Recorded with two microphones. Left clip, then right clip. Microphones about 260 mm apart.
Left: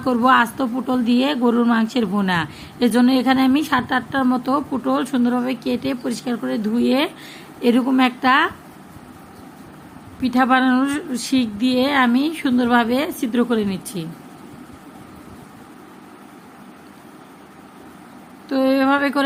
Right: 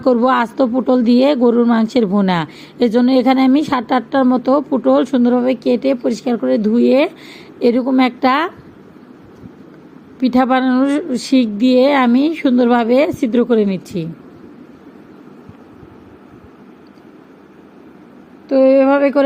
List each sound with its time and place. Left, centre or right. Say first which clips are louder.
0.0 s speech: right 2 dB; centre
10.2 s speech: right 3 dB; centre
18.4 s a sound: right 7 dB; centre